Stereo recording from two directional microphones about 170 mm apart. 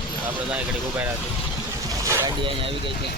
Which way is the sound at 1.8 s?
15° right (ahead or behind).